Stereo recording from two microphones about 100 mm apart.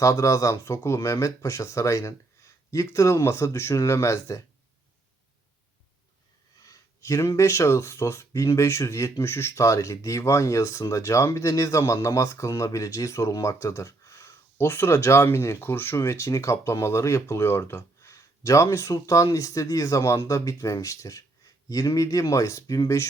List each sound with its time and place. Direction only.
0.0 s speech: 35° left (ahead or behind)
6.7 s speech: 30° left (ahead or behind)